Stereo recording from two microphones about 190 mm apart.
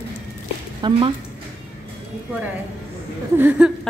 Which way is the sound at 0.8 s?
25° right (ahead or behind).